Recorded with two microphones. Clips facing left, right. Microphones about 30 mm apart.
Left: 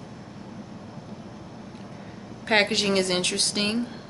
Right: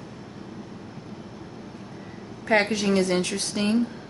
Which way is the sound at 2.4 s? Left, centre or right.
Left.